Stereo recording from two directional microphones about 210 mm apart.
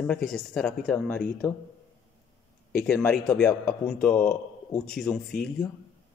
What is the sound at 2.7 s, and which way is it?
A man's voice, 10° left (ahead or behind).